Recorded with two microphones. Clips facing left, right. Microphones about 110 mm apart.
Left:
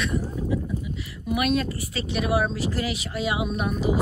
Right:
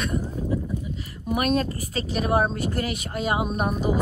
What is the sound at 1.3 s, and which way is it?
Speech, 40° right (ahead or behind).